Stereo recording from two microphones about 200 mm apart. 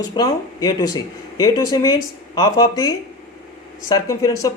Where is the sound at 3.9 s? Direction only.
15° left (ahead or behind).